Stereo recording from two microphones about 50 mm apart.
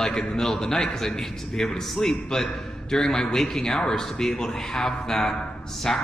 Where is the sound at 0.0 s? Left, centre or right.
Centre.